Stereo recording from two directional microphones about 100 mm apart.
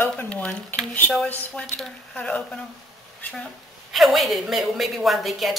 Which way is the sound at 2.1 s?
10° left (ahead or behind).